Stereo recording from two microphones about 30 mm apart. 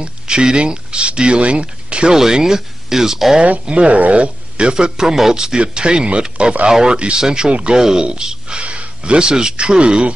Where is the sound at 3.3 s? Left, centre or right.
Right.